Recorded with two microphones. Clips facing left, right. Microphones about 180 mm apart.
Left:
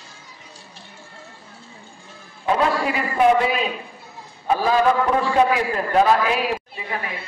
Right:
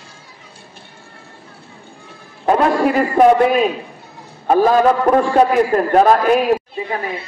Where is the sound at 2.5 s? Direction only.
50° right (ahead or behind).